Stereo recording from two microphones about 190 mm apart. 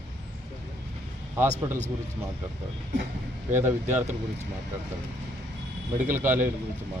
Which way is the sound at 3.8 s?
35° right (ahead or behind).